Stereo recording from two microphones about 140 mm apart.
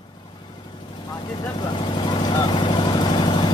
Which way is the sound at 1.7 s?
35° left (ahead or behind).